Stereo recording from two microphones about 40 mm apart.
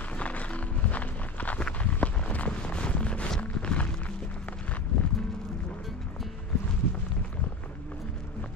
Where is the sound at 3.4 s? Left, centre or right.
Left.